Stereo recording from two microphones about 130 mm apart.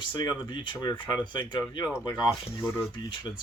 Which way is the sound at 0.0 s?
35° left (ahead or behind).